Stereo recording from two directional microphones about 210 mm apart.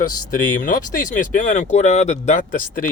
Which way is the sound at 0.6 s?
40° left (ahead or behind).